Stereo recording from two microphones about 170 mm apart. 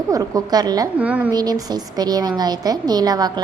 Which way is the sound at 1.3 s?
25° right (ahead or behind).